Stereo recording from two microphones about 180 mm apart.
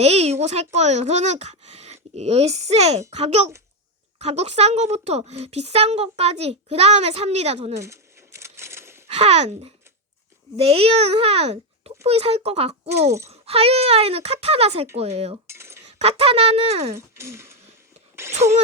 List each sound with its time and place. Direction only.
0.0 s a woman's voice: 35° right (ahead or behind)
7.8 s coin: 15° right (ahead or behind)
9.0 s a woman's voice: 35° right (ahead or behind)
15.4 s cutlery: 15° right (ahead or behind)
15.9 s a woman's voice: 35° right (ahead or behind)
16.9 s speech: 15° right (ahead or behind)